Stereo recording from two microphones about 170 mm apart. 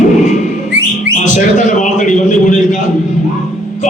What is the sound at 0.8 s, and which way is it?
Whistling, 90° right.